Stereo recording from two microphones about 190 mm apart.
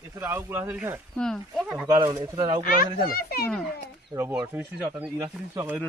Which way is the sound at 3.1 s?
55° left (ahead or behind).